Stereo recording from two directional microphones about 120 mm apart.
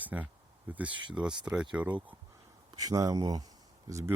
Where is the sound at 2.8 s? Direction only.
30° right (ahead or behind).